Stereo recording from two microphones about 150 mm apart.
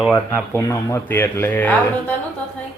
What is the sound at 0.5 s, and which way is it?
Speech, 20° left (ahead or behind).